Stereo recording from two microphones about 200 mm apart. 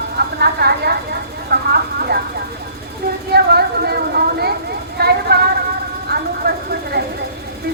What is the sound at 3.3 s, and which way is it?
A woman's voice, 50° right (ahead or behind).